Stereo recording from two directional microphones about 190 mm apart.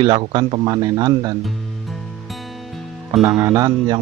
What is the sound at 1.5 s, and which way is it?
Music, centre (ahead or behind).